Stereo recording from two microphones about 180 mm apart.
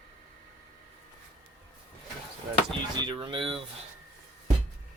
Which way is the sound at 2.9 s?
25° right (ahead or behind).